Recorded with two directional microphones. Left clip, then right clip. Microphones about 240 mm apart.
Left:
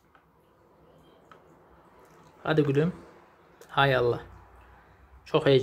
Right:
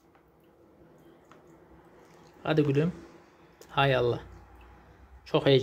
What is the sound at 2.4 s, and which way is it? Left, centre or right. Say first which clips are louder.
Speech: left 2 dB; centre.